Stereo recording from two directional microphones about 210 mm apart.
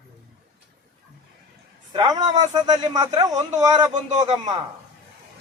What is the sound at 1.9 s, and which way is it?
Speech, 20° right (ahead or behind).